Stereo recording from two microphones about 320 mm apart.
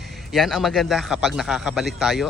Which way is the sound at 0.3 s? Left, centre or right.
Centre.